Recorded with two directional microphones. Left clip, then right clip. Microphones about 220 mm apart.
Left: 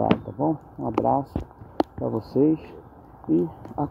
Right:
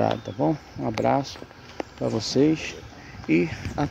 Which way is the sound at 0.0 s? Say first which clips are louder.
Even; 10° right (ahead or behind).